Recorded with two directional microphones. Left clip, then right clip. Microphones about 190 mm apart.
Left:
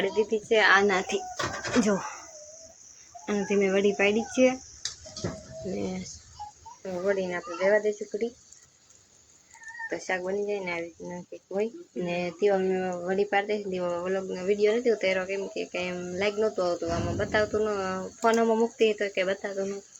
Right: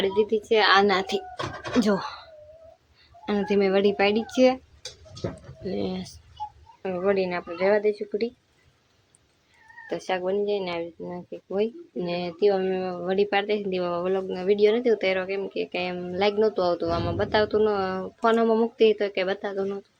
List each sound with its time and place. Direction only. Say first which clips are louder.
0.0 s speech: right 3 dB; 20° right (ahead or behind)
3.2 s speech: right 3 dB; 10° right (ahead or behind)
6.8 s speech: right 4 dB; 20° right (ahead or behind)
9.9 s speech: right 4 dB; 20° right (ahead or behind)
13.1 s speech: right 3 dB; 20° right (ahead or behind)